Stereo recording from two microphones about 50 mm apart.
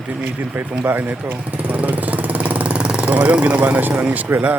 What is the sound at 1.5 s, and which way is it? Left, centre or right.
Vehicle, right.